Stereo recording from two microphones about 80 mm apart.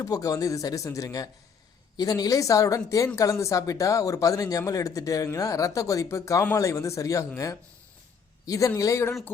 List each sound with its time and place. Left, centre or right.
0.0 s speech: left